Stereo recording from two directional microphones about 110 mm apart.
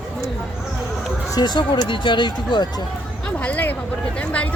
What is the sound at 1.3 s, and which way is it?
Speech, 40° left (ahead or behind).